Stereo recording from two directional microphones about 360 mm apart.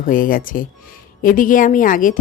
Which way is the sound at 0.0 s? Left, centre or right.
Left.